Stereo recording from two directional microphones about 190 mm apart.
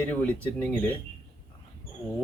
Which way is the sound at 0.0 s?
10° left (ahead or behind).